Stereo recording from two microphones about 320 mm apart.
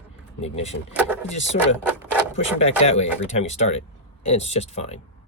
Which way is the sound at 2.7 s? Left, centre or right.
Centre.